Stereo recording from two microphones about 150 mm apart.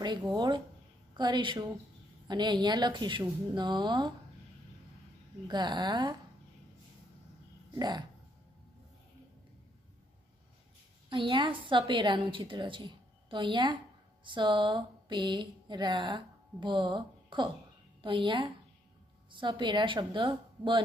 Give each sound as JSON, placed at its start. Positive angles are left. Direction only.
{"t": 0.0, "sound": "a woman's voice", "side_deg": -25}
{"t": 5.5, "sound": "speech", "side_deg": -30}
{"t": 7.7, "sound": "speech", "side_deg": -25}
{"t": 11.1, "sound": "a woman's voice", "side_deg": -35}
{"t": 14.2, "sound": "a sound", "side_deg": -30}
{"t": 18.0, "sound": "a woman's voice", "side_deg": -35}